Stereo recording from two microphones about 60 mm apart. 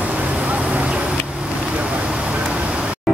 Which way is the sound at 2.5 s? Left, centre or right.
Centre.